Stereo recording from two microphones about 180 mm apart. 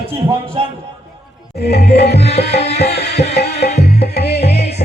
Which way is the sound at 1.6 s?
65° left (ahead or behind).